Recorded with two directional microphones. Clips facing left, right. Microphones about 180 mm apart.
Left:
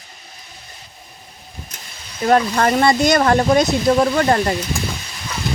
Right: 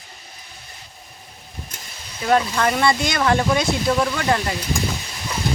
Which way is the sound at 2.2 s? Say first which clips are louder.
Left 3 dB; 45° left (ahead or behind).